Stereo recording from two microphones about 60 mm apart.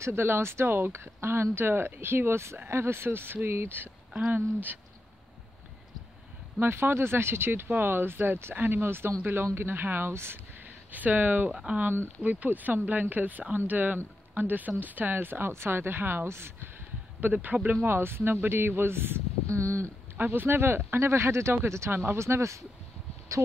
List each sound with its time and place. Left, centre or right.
0.0 s speech: right
6.6 s speech: right
11.5 s speech: centre
11.8 s speech: right
12.2 s speech: right
17.2 s speech: right
17.8 s speech: right
19.5 s speech: right
20.2 s speech: right